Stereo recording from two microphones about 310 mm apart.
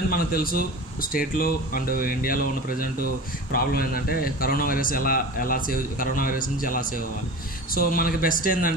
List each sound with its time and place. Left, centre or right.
0.1 s a man's voice: left